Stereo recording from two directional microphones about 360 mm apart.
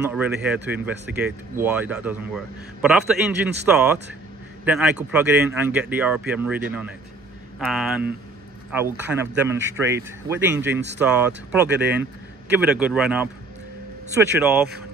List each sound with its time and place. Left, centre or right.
0.1 s speech: centre
7.6 s a man's voice: centre